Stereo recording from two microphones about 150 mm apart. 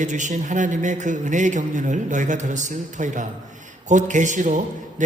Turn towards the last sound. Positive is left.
turn(degrees=-55)  # may be behind; listen again after turning